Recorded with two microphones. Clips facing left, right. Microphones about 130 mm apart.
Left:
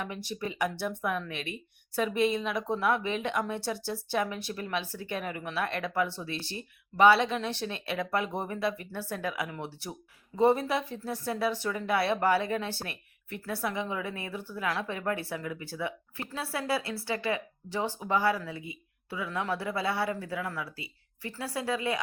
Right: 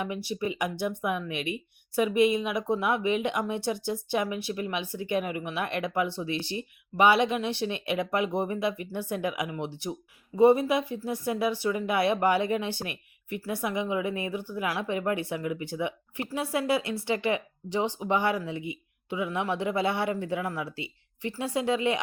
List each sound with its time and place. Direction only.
0.0 s speech: 10° right (ahead or behind)